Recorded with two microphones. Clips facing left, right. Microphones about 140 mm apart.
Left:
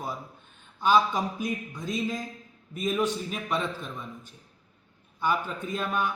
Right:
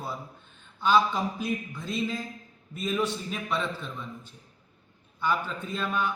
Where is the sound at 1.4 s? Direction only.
15° left (ahead or behind).